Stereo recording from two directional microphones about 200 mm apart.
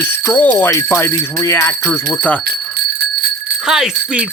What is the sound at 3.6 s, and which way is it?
Speech, 5° right (ahead or behind).